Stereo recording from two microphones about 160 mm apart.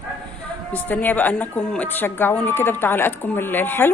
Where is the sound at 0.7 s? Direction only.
10° left (ahead or behind).